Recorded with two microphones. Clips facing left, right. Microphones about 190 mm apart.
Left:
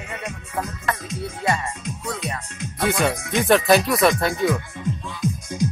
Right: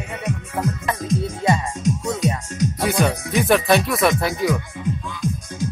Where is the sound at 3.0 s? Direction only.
Centre (ahead or behind).